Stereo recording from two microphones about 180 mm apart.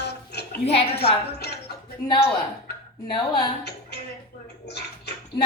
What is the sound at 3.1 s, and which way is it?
Speech, 25° left (ahead or behind).